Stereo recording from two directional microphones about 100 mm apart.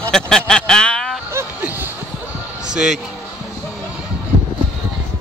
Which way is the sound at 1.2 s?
20° right (ahead or behind).